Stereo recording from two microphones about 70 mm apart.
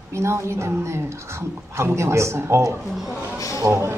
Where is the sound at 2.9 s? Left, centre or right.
Centre.